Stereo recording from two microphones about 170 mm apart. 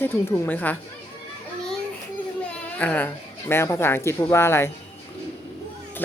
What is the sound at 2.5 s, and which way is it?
Speech, 10° left (ahead or behind).